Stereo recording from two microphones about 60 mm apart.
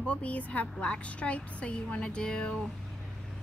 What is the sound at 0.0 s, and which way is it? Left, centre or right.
A woman's voice, left.